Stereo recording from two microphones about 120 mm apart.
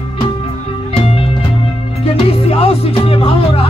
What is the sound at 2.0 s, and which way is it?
Music, 55° left (ahead or behind).